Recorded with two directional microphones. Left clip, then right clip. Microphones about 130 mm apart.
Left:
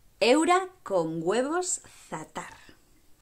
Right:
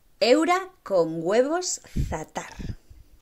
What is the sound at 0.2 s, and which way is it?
Speech, 5° right (ahead or behind).